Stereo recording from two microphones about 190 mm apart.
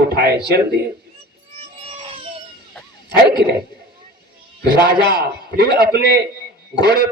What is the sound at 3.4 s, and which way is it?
Speech, 65° right (ahead or behind).